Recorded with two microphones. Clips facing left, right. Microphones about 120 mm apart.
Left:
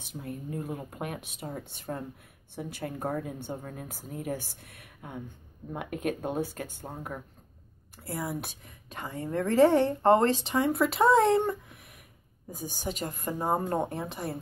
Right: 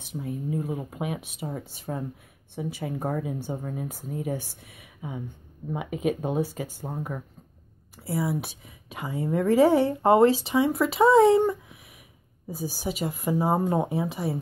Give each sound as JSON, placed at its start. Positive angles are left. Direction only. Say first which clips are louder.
{"t": 0.0, "sound": "a woman's voice", "louder": "right 6 dB", "side_deg": 0}